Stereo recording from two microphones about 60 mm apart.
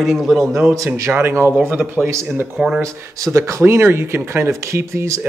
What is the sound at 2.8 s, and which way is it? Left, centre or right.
Speech, right.